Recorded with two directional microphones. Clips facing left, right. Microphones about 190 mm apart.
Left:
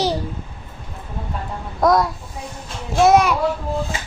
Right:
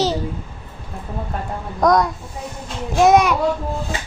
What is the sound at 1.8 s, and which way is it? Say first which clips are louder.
A child's voice: even; centre (ahead or behind).